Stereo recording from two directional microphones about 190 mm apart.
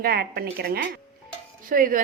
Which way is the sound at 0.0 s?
55° right (ahead or behind).